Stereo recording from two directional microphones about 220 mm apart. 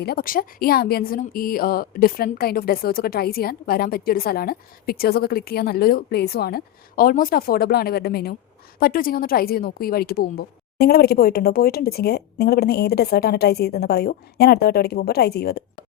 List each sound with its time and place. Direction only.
0.0 s speech: 45° left (ahead or behind)